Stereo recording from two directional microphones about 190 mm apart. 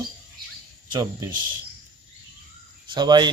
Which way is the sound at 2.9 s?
25° right (ahead or behind).